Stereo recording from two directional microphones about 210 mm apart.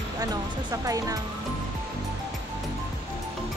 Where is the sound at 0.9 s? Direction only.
15° right (ahead or behind).